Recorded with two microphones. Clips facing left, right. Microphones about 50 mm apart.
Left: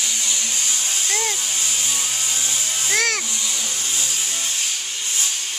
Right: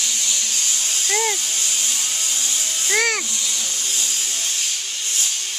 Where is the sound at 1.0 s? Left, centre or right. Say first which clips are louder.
Right 5 dB; centre.